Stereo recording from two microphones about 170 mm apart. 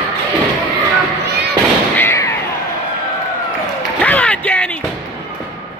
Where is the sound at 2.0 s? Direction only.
15° left (ahead or behind).